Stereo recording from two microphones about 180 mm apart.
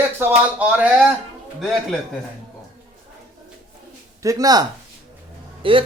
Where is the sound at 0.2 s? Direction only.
10° right (ahead or behind).